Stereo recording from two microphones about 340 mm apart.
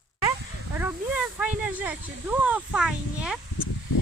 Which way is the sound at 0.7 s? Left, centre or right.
Centre.